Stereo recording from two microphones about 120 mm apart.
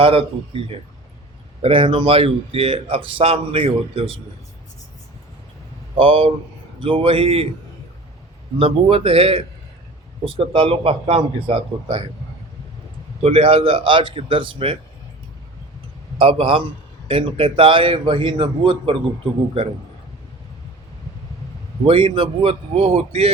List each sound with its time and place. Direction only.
0.0 s a man's voice: 50° right (ahead or behind)
1.6 s a man's voice: 50° right (ahead or behind)
6.0 s a man's voice: 50° right (ahead or behind)
8.5 s a man's voice: 50° right (ahead or behind)
13.2 s a man's voice: 50° right (ahead or behind)
16.1 s a man's voice: 50° right (ahead or behind)
21.8 s a man's voice: 45° right (ahead or behind)